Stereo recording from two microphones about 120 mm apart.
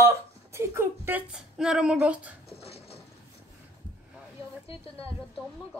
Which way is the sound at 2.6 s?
55° left (ahead or behind).